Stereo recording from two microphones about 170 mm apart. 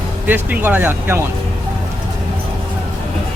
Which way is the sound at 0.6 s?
10° right (ahead or behind).